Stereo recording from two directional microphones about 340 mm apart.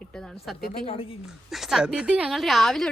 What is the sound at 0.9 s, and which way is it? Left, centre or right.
Speech, centre.